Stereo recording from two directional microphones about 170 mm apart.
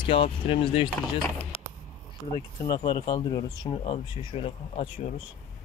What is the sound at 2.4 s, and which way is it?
Speech, 25° left (ahead or behind).